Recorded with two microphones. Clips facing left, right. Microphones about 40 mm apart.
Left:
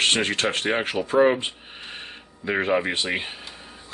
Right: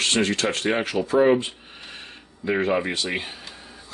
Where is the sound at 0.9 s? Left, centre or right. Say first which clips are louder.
Right 2 dB; centre.